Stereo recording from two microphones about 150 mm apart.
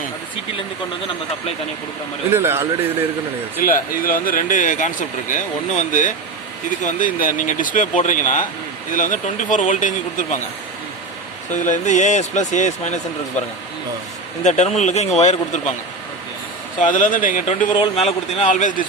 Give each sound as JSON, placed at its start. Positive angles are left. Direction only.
{"t": 2.3, "sound": "a man's voice", "side_deg": -15}
{"t": 3.6, "sound": "speech", "side_deg": 70}
{"t": 11.5, "sound": "speech", "side_deg": 55}
{"t": 14.4, "sound": "speech", "side_deg": 50}
{"t": 16.8, "sound": "speech", "side_deg": 60}
{"t": 17.7, "sound": "speech", "side_deg": 45}